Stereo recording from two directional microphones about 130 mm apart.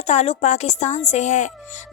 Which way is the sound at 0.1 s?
60° left (ahead or behind).